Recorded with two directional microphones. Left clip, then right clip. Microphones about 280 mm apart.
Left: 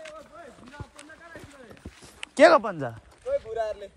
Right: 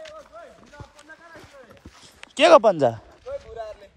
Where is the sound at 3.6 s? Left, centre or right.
Left.